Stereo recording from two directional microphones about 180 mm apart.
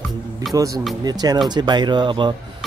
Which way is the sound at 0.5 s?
20° right (ahead or behind).